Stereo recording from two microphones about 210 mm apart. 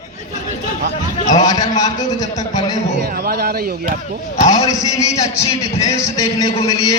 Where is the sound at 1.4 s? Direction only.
15° left (ahead or behind).